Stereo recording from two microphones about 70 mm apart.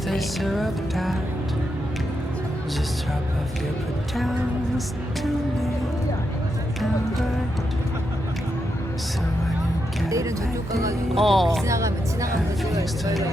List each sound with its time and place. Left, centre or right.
0.1 s music: centre
10.1 s speech: right
11.1 s music: centre
11.6 s speech: right